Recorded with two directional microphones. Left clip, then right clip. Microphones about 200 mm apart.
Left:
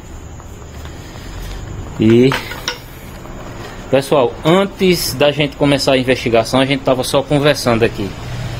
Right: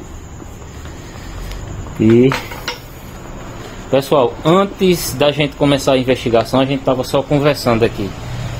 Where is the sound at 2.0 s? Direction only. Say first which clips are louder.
Even; 25° left (ahead or behind).